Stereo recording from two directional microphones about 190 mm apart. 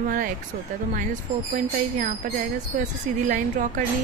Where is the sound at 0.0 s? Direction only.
45° right (ahead or behind).